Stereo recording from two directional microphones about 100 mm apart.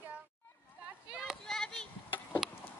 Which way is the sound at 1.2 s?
5° left (ahead or behind).